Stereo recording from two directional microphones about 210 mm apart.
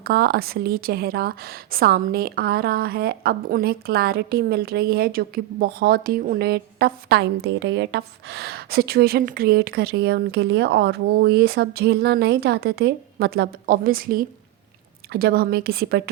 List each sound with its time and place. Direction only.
0.0 s a woman's voice: 45° right (ahead or behind)